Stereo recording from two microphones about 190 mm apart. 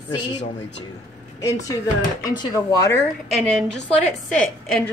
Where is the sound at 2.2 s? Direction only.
20° left (ahead or behind).